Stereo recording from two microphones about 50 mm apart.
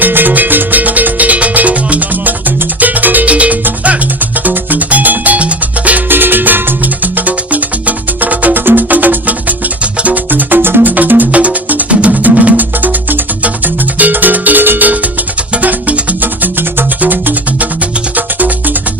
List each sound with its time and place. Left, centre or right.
0.0 s music: right
6.1 s music: right
10.2 s music: right